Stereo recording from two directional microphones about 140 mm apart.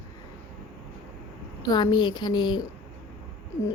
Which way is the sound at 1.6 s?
30° left (ahead or behind).